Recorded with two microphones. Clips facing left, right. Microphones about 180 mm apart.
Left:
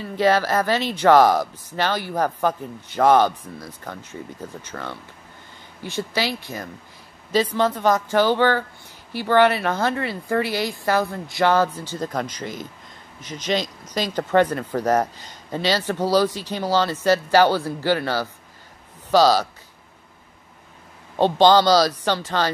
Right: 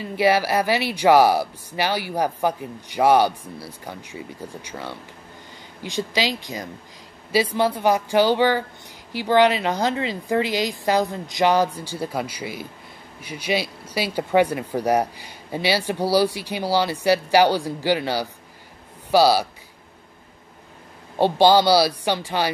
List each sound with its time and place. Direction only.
0.0 s speech: 10° right (ahead or behind)
21.2 s speech: 10° right (ahead or behind)